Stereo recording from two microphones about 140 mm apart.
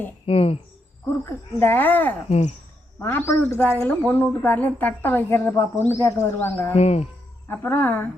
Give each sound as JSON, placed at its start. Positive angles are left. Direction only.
{"t": 0.3, "sound": "speech", "side_deg": 45}
{"t": 1.2, "sound": "speech", "side_deg": 15}
{"t": 6.7, "sound": "speech", "side_deg": 50}
{"t": 7.4, "sound": "speech", "side_deg": 15}